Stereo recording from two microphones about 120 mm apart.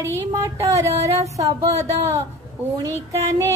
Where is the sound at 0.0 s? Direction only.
25° right (ahead or behind).